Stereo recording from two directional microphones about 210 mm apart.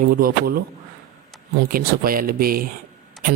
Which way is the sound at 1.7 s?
45° right (ahead or behind).